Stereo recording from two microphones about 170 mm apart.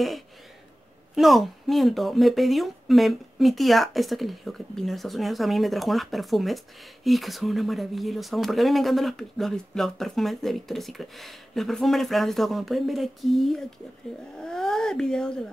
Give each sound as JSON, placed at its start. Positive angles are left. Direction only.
{"t": 1.1, "sound": "speech", "side_deg": 0}